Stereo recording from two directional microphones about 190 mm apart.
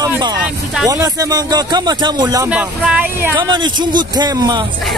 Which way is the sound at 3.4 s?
25° right (ahead or behind).